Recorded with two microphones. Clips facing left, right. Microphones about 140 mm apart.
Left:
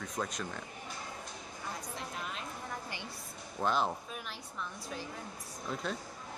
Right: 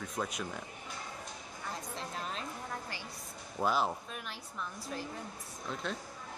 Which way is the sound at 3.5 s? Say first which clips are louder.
Even; 5° right (ahead or behind).